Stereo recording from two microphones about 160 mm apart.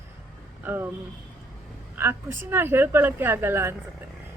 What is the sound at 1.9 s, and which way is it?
Speech, 15° right (ahead or behind).